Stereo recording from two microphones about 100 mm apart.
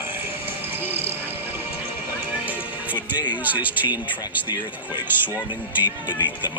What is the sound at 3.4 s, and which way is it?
Speech, 15° right (ahead or behind).